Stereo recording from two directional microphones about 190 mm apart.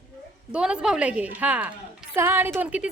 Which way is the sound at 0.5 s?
5° right (ahead or behind).